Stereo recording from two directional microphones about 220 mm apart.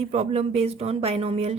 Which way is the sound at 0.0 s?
30° right (ahead or behind).